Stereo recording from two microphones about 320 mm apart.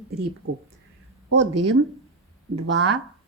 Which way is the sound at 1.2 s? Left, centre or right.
Right.